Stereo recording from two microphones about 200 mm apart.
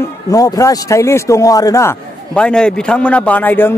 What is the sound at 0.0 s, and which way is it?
A man's voice, 15° left (ahead or behind).